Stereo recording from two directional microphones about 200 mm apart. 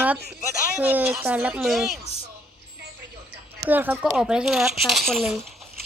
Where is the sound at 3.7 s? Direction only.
10° right (ahead or behind).